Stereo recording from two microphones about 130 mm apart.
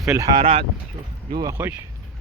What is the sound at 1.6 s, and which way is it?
Speech, 15° right (ahead or behind).